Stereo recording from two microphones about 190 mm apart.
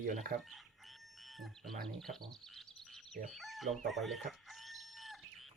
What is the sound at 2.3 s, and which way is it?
Chirp, centre (ahead or behind).